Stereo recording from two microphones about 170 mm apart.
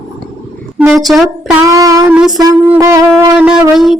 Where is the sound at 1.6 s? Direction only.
20° right (ahead or behind).